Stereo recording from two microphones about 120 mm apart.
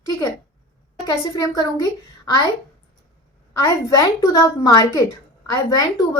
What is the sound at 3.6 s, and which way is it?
A woman's voice, 30° left (ahead or behind).